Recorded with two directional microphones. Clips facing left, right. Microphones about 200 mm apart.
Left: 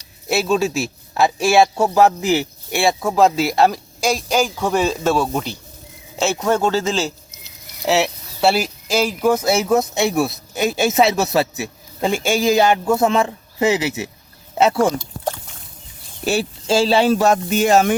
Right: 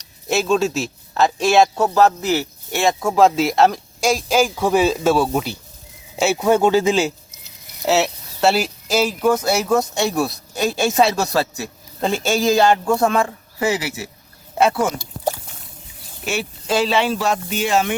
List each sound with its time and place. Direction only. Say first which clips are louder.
0.3 s a man's voice: even; 5° left (ahead or behind); by 14.9 s 25° left (ahead or behind)
16.2 s speech: left 5 dB; 35° left (ahead or behind)